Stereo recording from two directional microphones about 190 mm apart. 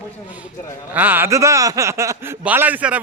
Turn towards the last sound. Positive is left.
turn(degrees=-10)  # may be behind; listen again after turning